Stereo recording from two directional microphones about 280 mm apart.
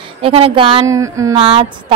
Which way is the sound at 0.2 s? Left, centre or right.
Centre.